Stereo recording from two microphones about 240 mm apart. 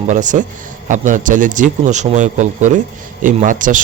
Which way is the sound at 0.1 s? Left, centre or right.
Right.